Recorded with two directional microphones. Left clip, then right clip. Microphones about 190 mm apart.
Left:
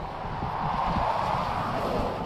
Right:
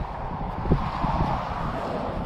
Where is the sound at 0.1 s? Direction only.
20° left (ahead or behind).